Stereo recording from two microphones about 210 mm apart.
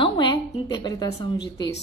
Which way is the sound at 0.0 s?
20° left (ahead or behind).